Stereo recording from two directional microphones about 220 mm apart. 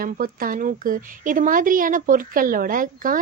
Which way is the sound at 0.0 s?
40° right (ahead or behind).